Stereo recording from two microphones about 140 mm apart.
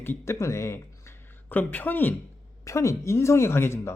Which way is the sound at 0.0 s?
15° left (ahead or behind).